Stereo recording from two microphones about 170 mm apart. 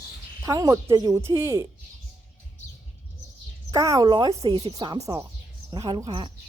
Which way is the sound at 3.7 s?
20° right (ahead or behind).